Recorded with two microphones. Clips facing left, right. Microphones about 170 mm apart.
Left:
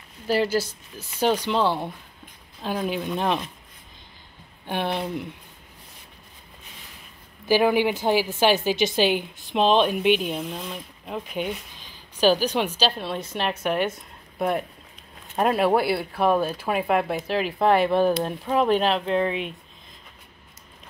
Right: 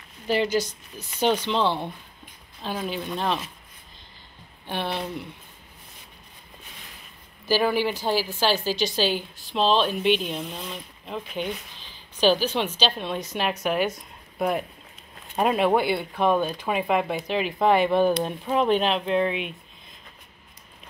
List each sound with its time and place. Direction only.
0.3 s a woman's voice: 5° left (ahead or behind)
2.9 s a woman's voice: 10° left (ahead or behind)
4.6 s a woman's voice: 15° left (ahead or behind)
7.4 s a woman's voice: 15° left (ahead or behind)
19.0 s speech: 35° left (ahead or behind)